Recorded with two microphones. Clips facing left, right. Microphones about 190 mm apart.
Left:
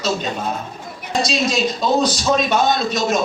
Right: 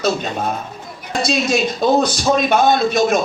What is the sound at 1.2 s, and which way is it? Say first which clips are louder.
Speech: right 3 dB; 55° right (ahead or behind).